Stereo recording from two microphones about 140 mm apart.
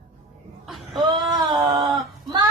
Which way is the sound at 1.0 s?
30° right (ahead or behind).